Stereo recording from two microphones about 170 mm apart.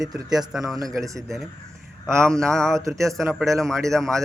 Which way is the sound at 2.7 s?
20° right (ahead or behind).